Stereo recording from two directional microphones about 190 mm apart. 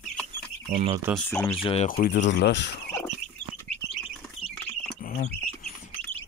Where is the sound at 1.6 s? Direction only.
30° left (ahead or behind).